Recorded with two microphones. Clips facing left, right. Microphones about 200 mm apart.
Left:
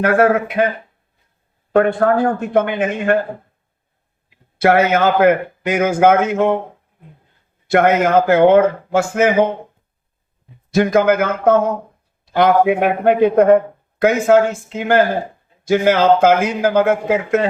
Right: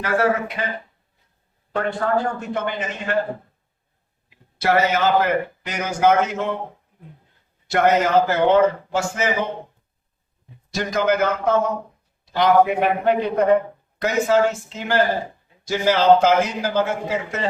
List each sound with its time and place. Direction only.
0.0 s a man's voice: 55° left (ahead or behind)
1.7 s speech: 55° left (ahead or behind)
4.5 s a man's voice: 55° left (ahead or behind)
7.7 s speech: 55° left (ahead or behind)
10.7 s a man's voice: 55° left (ahead or behind)